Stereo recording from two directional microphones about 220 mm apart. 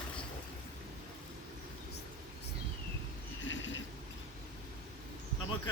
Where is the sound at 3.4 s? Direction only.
55° left (ahead or behind).